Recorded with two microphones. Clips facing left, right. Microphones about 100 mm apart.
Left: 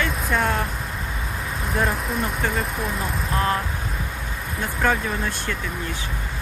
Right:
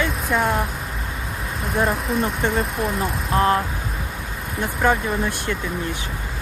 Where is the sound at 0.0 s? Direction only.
5° right (ahead or behind).